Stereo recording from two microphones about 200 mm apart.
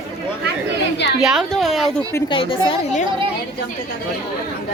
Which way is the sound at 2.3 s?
25° left (ahead or behind).